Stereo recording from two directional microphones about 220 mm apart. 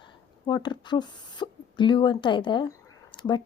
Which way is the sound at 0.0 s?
20° left (ahead or behind).